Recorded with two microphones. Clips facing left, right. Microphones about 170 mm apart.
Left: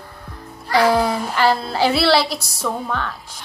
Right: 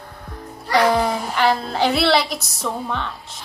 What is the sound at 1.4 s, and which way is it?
A woman's voice, 5° left (ahead or behind).